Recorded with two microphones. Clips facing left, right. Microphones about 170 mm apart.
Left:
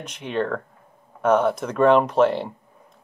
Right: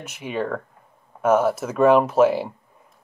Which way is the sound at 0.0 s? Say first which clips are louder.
Left 1 dB; 5° right (ahead or behind).